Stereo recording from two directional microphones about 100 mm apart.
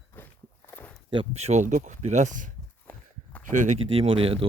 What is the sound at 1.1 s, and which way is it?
Speech, 75° right (ahead or behind).